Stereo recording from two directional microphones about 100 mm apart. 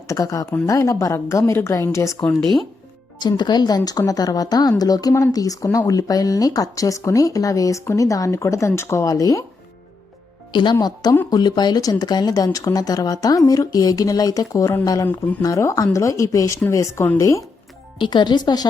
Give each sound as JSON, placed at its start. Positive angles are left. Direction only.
{"t": 0.1, "sound": "a woman's voice", "side_deg": 35}
{"t": 3.2, "sound": "speech", "side_deg": 45}
{"t": 10.5, "sound": "a woman's voice", "side_deg": 50}
{"t": 18.0, "sound": "speech", "side_deg": 50}